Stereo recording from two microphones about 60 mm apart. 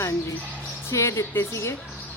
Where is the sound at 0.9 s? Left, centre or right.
Left.